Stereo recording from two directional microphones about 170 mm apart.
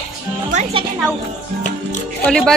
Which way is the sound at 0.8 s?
30° right (ahead or behind).